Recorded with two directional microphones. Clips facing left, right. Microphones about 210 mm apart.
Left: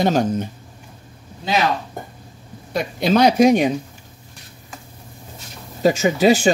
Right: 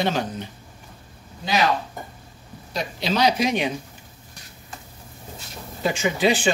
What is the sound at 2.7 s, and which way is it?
Speech, 50° left (ahead or behind).